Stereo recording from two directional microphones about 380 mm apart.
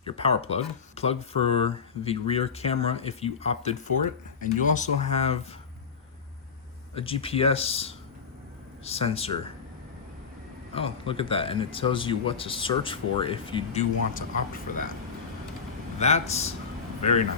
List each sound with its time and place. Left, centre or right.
0.0 s speech: centre
6.9 s speech: centre
10.8 s speech: centre
16.0 s speech: centre